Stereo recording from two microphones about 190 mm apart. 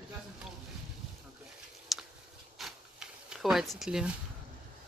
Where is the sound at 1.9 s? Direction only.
Centre (ahead or behind).